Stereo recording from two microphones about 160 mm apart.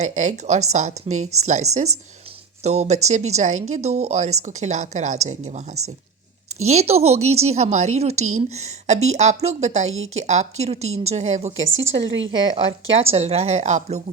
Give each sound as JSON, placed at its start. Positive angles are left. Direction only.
{"t": 0.0, "sound": "a woman's voice", "side_deg": -45}